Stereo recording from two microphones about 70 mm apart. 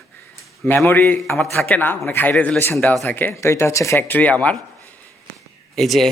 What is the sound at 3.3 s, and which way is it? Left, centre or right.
Speech, left.